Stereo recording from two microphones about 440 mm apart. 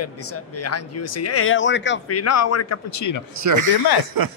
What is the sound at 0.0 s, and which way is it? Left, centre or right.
Speech, left.